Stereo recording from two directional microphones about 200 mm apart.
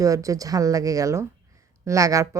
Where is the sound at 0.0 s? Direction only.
15° right (ahead or behind).